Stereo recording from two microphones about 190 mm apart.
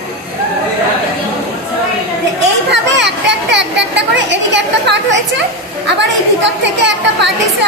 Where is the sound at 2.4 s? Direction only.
65° right (ahead or behind).